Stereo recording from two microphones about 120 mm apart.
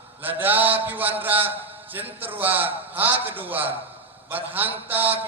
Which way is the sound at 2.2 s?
15° right (ahead or behind).